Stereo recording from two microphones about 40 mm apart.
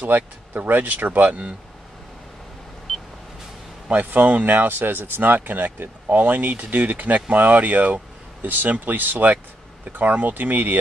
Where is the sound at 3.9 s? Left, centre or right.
Right.